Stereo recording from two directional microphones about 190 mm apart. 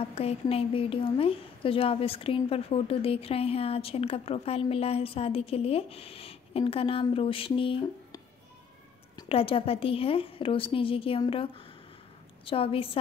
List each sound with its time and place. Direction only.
0.0 s a woman's voice: 30° left (ahead or behind)
12.4 s a woman's voice: 30° left (ahead or behind)